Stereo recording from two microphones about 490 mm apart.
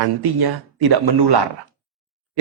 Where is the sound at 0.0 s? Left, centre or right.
Right.